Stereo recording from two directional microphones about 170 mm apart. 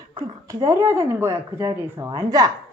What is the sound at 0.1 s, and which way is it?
Speech, 20° right (ahead or behind).